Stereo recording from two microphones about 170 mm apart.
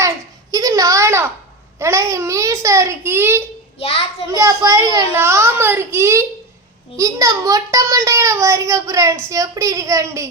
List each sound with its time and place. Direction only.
0.5 s a sound: 20° right (ahead or behind)
1.8 s a child's voice: 15° right (ahead or behind)
3.8 s a child's voice: 35° left (ahead or behind)
4.4 s a child's voice: 20° right (ahead or behind)